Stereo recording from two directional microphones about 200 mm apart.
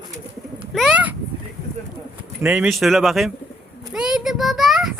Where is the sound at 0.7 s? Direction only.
Centre (ahead or behind).